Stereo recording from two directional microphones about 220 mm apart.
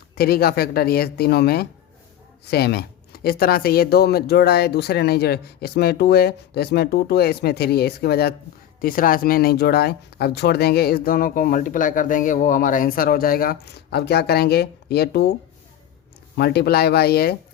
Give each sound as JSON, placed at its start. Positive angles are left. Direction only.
{"t": 0.2, "sound": "speech", "side_deg": 45}